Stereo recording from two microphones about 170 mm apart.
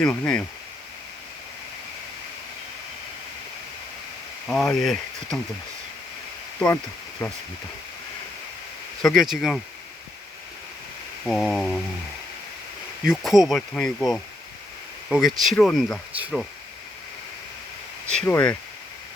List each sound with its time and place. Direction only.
0.0 s speech: 5° left (ahead or behind)
4.4 s speech: 5° left (ahead or behind)
7.2 s speech: 15° left (ahead or behind)
9.0 s speech: centre (ahead or behind)
11.3 s speech: 5° left (ahead or behind)
13.1 s speech: centre (ahead or behind)
16.1 s speech: 10° right (ahead or behind)
18.1 s speech: 10° left (ahead or behind)